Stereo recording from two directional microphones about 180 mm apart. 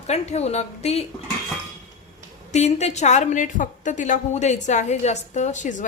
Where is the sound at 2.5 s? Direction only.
40° left (ahead or behind).